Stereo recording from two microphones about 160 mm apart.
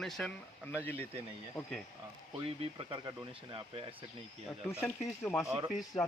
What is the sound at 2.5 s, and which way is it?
Speech, 35° right (ahead or behind).